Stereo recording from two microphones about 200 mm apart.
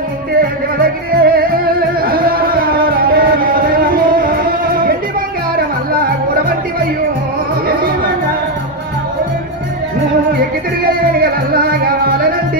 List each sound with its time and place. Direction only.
0.8 s music: 45° right (ahead or behind)
11.1 s music: 45° right (ahead or behind)